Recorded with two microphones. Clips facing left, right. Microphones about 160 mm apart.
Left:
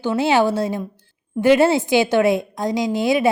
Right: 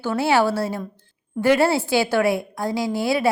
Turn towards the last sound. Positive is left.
turn(degrees=20)  # may be behind; listen again after turning